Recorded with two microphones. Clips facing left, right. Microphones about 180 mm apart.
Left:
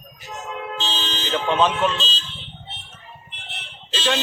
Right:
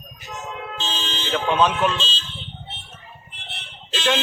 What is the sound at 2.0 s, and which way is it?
Speech, 40° left (ahead or behind).